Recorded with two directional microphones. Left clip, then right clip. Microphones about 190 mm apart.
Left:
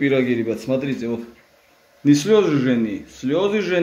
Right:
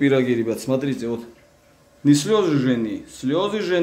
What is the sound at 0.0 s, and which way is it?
A man's voice, 10° right (ahead or behind).